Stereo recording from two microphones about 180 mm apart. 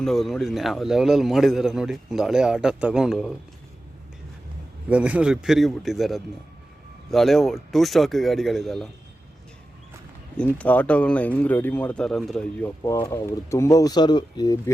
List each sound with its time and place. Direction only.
0.0 s a man's voice: centre (ahead or behind)
4.9 s a man's voice: 5° right (ahead or behind)
10.3 s speech: 5° left (ahead or behind)
12.8 s speech: 15° left (ahead or behind)